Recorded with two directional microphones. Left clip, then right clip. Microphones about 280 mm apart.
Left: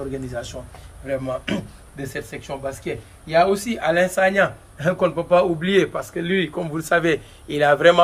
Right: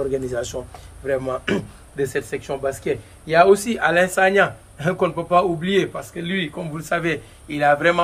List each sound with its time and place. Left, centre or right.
0.1 s a man's voice: right; by 8.0 s left